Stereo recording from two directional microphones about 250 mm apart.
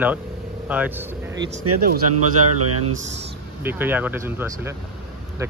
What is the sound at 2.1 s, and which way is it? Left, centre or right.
Speech, right.